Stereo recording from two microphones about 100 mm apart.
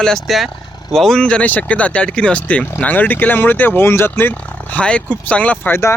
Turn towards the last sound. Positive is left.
turn(degrees=15)  # may be behind; listen again after turning